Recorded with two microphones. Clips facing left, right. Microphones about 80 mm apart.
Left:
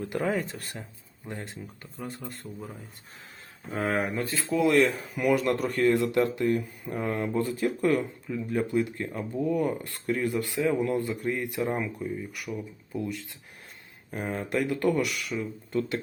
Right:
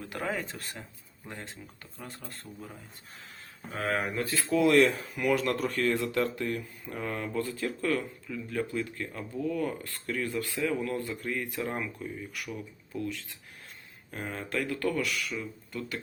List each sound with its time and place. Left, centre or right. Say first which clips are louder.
0.1 s speech: left 6 dB; left
4.0 s speech: left 2 dB; centre
4.4 s speech: even; centre; by 12.6 s left
12.9 s speech: left 2 dB; centre
14.1 s speech: left 5 dB; centre